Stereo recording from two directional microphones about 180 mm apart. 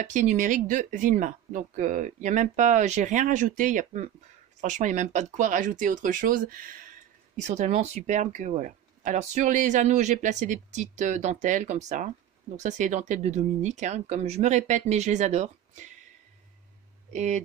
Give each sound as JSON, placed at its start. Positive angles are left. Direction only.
{"t": 0.0, "sound": "speech", "side_deg": -45}
{"t": 17.1, "sound": "speech", "side_deg": -40}